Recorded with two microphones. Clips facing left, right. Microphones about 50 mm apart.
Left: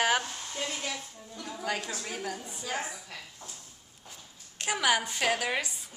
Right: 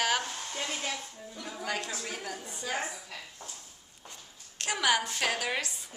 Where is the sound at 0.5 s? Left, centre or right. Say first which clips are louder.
Left 1 dB; right.